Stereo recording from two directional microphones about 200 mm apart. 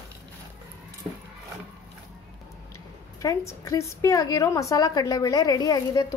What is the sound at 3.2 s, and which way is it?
A woman's voice, 15° left (ahead or behind).